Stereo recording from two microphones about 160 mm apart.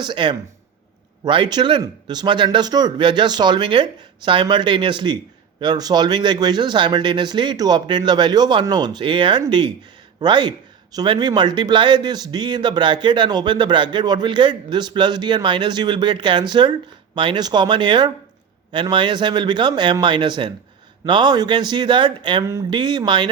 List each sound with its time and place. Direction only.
0.0 s speech: 30° right (ahead or behind)